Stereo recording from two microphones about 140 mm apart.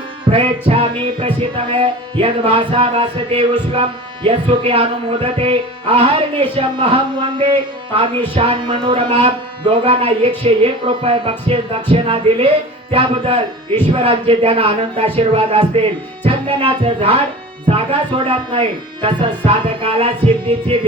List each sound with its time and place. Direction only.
0.3 s music: 45° right (ahead or behind)
6.6 s speech: 40° right (ahead or behind)
12.9 s music: 40° right (ahead or behind)
16.2 s speech: 40° right (ahead or behind)
18.2 s speech: 40° right (ahead or behind)
19.0 s music: 40° right (ahead or behind)